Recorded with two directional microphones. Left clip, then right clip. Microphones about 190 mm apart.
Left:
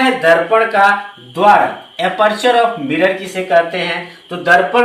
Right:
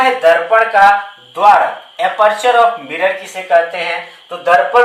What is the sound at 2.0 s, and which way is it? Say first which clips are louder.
Speech: right 2 dB; 15° left (ahead or behind).